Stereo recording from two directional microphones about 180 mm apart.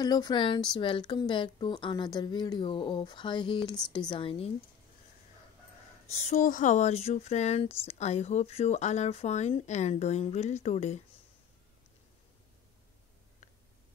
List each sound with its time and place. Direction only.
0.0 s a woman's voice: 20° left (ahead or behind)
6.1 s speech: 40° left (ahead or behind)